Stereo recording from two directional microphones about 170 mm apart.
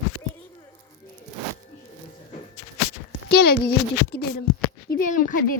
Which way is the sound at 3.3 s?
65° left (ahead or behind).